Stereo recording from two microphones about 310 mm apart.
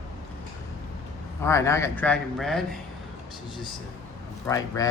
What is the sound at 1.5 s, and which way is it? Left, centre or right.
A man's voice, centre.